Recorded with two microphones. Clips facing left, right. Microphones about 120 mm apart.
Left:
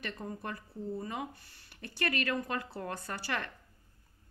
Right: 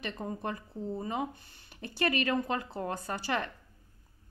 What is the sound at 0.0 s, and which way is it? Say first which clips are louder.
Speech: right 4 dB; 20° right (ahead or behind).